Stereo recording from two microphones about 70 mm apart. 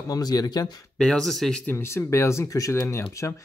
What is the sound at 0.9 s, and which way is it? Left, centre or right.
Speech, centre.